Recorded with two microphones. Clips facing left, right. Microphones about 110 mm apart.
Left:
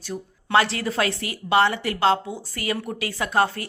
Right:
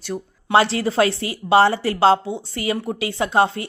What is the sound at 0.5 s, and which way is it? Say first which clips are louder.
A woman's voice: right 4 dB; 30° right (ahead or behind).